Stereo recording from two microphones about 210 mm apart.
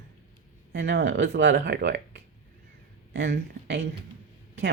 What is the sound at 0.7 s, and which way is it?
Speech, 55° right (ahead or behind).